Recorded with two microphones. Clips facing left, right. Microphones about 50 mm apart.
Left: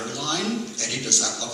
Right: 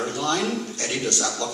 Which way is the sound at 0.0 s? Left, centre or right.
Right.